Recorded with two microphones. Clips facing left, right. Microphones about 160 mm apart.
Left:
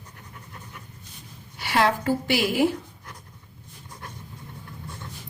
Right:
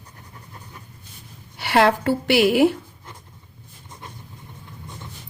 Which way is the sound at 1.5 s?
65° right (ahead or behind).